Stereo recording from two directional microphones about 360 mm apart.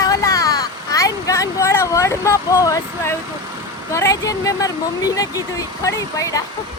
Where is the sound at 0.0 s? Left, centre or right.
Centre.